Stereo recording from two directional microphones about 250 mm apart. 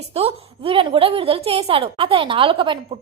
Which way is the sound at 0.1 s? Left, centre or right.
Right.